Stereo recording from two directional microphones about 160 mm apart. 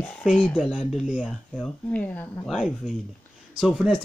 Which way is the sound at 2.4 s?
Centre (ahead or behind).